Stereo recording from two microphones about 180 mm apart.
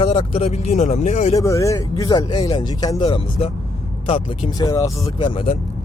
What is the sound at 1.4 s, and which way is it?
Speech, 15° left (ahead or behind).